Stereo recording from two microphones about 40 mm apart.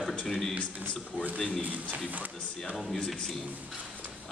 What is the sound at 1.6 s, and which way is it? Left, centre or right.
Speech, right.